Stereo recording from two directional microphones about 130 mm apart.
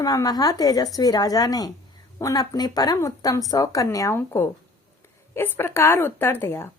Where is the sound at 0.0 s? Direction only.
25° left (ahead or behind).